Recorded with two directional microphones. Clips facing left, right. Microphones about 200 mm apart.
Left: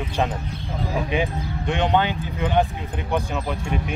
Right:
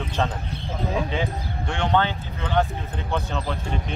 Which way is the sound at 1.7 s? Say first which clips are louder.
Left 2 dB; 15° left (ahead or behind).